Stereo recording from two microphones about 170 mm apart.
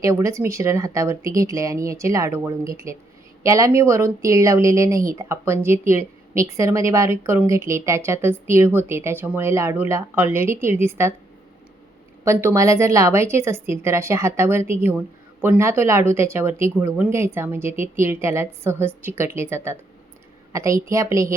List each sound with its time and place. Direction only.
0.0 s speech: 20° right (ahead or behind)
12.2 s a woman's voice: 15° right (ahead or behind)